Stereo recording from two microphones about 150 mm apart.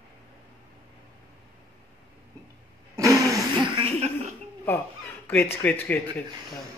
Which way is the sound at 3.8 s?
45° right (ahead or behind).